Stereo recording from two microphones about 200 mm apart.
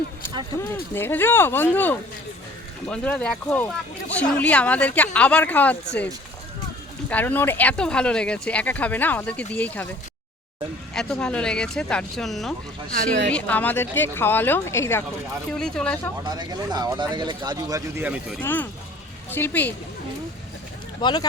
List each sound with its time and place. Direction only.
0.9 s speech: 10° left (ahead or behind)
7.1 s speech: 10° left (ahead or behind)
10.9 s speech: 5° left (ahead or behind)
16.2 s speech: 20° right (ahead or behind)
18.4 s speech: 10° left (ahead or behind)
21.0 s speech: 20° left (ahead or behind)